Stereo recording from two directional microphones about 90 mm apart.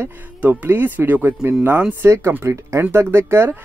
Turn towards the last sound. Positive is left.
turn(degrees=-30)  # may be behind; listen again after turning